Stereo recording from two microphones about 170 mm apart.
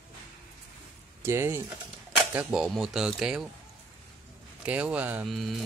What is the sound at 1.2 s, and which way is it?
Speech, 15° right (ahead or behind).